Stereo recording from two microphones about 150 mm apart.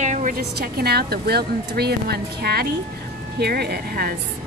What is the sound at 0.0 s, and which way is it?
Speech, 55° right (ahead or behind).